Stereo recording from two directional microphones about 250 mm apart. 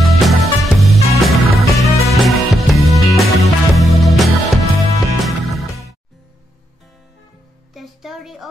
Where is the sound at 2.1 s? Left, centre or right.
Centre.